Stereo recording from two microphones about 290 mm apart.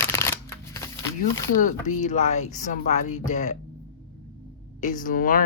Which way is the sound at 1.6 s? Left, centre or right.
Left.